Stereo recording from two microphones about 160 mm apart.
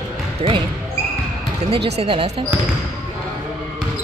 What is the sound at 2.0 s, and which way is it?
Speech, 35° right (ahead or behind).